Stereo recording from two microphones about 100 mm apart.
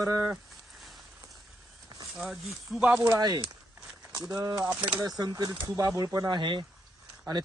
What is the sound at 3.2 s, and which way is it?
Speech, 45° right (ahead or behind).